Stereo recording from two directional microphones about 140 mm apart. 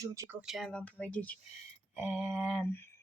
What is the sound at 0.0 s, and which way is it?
Speech, 25° right (ahead or behind).